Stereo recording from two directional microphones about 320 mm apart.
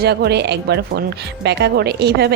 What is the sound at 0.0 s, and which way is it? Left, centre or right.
A woman's voice, right.